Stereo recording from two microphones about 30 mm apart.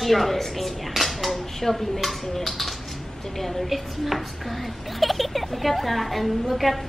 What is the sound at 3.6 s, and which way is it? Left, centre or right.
A woman's voice, centre.